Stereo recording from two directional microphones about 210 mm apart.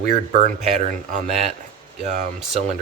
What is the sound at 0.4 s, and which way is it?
Speech, 35° right (ahead or behind).